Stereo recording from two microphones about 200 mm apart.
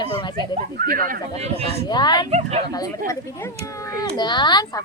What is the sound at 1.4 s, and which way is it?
Speech, 30° right (ahead or behind).